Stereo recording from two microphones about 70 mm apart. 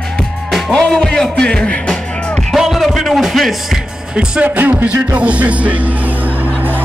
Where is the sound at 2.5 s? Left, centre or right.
Centre.